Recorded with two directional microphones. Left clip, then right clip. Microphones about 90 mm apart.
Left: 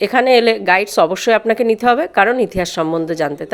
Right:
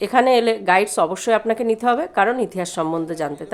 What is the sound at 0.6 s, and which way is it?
Speech, 35° left (ahead or behind).